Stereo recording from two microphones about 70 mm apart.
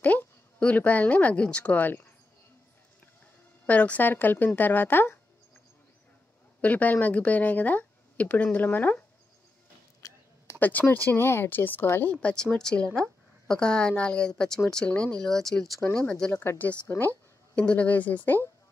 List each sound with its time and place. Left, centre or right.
0.6 s speech: centre
3.6 s speech: left
6.6 s speech: left
10.0 s a sound: left
10.6 s speech: left
12.1 s speech: centre
14.8 s speech: left
15.2 s speech: centre
16.0 s speech: centre
16.3 s speech: left
17.6 s speech: centre